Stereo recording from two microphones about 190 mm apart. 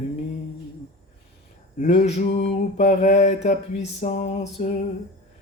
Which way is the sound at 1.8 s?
35° left (ahead or behind).